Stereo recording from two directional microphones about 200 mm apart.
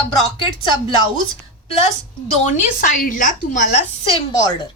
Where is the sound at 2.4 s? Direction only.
40° left (ahead or behind).